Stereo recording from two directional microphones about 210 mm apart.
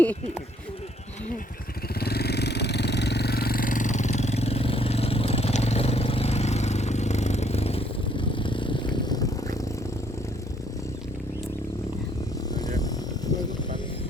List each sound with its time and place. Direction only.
2.0 s vehicle: 50° left (ahead or behind); by 9.6 s 20° left (ahead or behind)
12.5 s vehicle: 15° left (ahead or behind)